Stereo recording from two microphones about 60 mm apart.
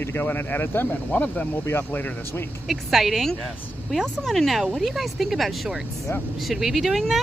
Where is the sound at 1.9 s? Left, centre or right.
Left.